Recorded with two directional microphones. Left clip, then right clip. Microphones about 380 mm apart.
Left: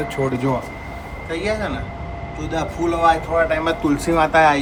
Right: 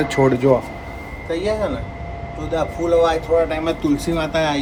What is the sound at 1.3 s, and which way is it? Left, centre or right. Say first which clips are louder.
Speech: right 2 dB; centre.